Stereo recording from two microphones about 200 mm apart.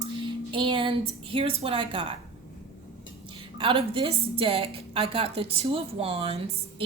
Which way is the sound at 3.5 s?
25° right (ahead or behind).